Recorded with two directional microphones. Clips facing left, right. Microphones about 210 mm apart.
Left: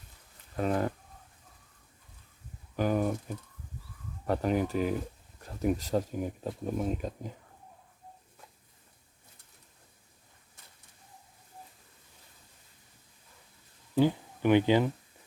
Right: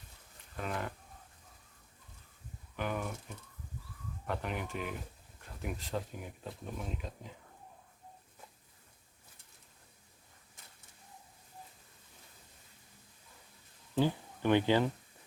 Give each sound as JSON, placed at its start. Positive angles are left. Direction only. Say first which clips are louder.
{"t": 0.5, "sound": "speech", "louder": "left 9 dB", "side_deg": 40}
{"t": 2.7, "sound": "speech", "louder": "left 9 dB", "side_deg": 40}
{"t": 4.3, "sound": "speech", "louder": "left 10 dB", "side_deg": 40}
{"t": 13.9, "sound": "speech", "louder": "left 5 dB", "side_deg": 15}